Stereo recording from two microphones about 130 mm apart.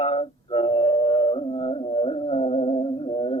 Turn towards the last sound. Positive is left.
turn(degrees=45)  # may be behind; listen again after turning